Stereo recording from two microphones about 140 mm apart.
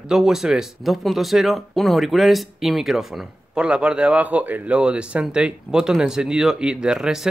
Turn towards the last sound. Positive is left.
turn(degrees=-5)  # may be behind; listen again after turning